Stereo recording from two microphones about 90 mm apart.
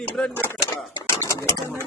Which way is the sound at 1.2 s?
35° left (ahead or behind).